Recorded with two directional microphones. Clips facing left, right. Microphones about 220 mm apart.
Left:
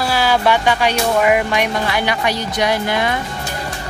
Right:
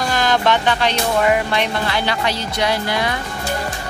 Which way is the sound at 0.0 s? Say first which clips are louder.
Left 2 dB; 10° left (ahead or behind).